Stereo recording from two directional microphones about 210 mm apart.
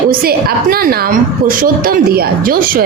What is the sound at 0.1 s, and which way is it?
A woman's voice, 45° right (ahead or behind).